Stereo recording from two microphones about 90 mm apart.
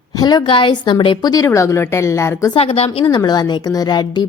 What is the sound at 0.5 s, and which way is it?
Speech, 60° left (ahead or behind).